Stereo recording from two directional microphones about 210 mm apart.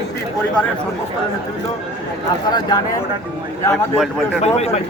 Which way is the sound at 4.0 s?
Centre (ahead or behind).